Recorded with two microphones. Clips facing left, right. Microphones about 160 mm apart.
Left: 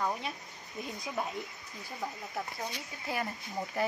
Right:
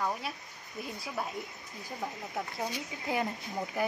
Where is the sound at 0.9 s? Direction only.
5° right (ahead or behind).